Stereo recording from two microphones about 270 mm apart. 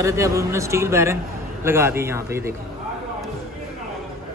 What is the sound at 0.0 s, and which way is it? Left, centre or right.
Speech, centre.